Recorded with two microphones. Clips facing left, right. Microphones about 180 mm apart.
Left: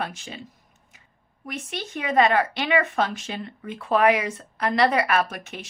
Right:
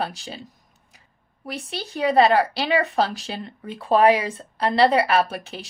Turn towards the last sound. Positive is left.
turn(degrees=-30)  # may be behind; listen again after turning